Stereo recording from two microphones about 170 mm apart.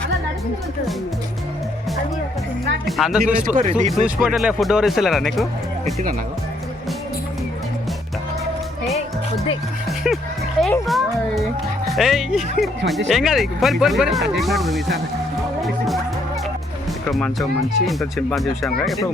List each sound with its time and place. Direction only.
2.8 s speech: centre (ahead or behind)
3.5 s speech: 45° right (ahead or behind)
4.0 s speech: 5° right (ahead or behind)
10.6 s speech: centre (ahead or behind)
17.1 s speech: 5° left (ahead or behind)